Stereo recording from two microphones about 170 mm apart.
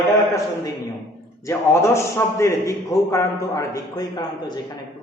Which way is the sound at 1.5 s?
15° left (ahead or behind).